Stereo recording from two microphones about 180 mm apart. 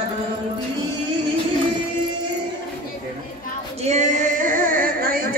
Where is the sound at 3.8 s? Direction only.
40° right (ahead or behind).